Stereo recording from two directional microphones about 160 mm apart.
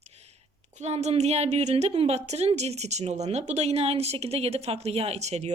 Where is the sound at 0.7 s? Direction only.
45° right (ahead or behind).